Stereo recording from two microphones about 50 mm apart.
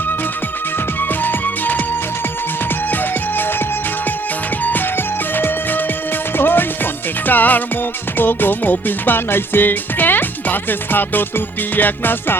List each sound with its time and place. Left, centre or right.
1.2 s music: left
6.3 s music: left